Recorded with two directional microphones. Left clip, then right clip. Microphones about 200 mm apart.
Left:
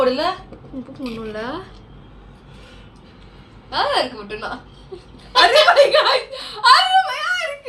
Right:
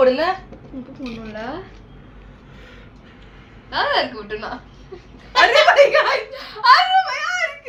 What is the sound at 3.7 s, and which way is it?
Speech, 10° left (ahead or behind).